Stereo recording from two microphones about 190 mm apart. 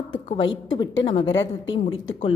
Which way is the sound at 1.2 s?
85° left.